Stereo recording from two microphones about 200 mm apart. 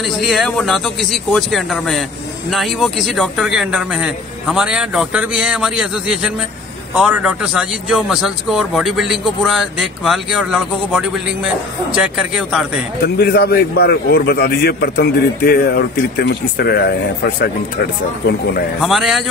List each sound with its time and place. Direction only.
0.2 s a man's voice: centre (ahead or behind)
13.0 s a man's voice: 50° left (ahead or behind)
18.8 s a man's voice: centre (ahead or behind)